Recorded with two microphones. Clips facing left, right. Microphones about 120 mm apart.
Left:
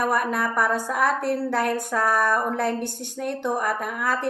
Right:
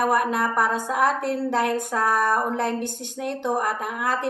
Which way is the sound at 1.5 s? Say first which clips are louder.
Right 1 dB; 20° right (ahead or behind).